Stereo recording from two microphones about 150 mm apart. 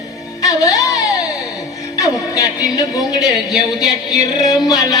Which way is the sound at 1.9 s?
20° left (ahead or behind).